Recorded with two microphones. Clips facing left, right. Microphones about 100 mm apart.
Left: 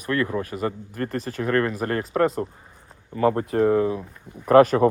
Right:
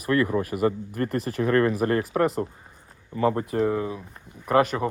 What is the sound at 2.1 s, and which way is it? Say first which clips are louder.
Speech: left 2 dB; 10° right (ahead or behind).